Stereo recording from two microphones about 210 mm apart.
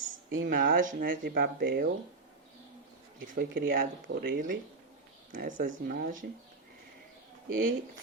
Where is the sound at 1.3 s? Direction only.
50° right (ahead or behind).